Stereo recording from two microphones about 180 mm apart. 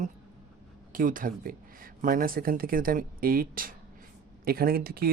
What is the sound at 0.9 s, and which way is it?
Speech, 50° right (ahead or behind).